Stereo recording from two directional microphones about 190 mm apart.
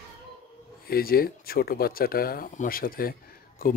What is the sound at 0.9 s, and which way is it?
Speech, 50° left (ahead or behind).